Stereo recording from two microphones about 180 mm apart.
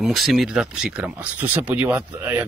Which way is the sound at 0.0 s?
Centre (ahead or behind).